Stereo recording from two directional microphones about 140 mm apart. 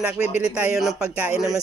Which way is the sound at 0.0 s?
10° right (ahead or behind).